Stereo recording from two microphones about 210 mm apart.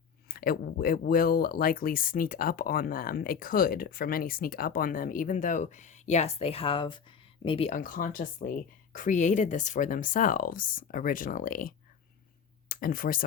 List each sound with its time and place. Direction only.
0.3 s speech: 45° left (ahead or behind)